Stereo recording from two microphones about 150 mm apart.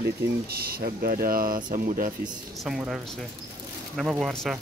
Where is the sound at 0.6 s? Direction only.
85° right; by 2.1 s 65° right (ahead or behind).